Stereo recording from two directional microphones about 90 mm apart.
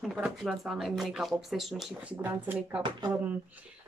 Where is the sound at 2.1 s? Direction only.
25° right (ahead or behind).